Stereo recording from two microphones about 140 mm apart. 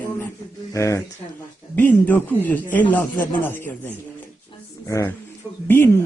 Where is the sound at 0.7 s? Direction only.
20° left (ahead or behind).